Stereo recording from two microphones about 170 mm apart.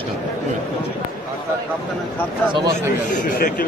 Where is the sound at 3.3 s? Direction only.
60° left (ahead or behind).